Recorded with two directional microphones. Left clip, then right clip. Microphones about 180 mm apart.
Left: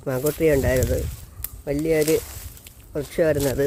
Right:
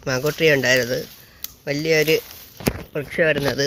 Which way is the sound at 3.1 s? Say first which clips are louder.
Right 2 dB; 15° left (ahead or behind).